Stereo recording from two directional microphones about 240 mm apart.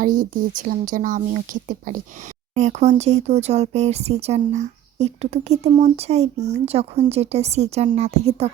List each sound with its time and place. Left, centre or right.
0.0 s speech: right